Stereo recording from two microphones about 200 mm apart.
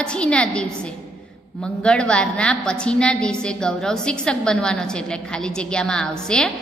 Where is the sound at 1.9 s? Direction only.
5° left (ahead or behind).